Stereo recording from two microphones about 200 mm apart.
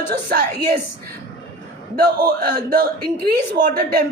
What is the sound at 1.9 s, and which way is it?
A woman's voice, 50° right (ahead or behind).